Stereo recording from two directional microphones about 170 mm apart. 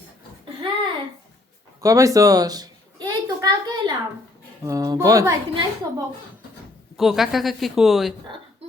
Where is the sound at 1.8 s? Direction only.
20° right (ahead or behind).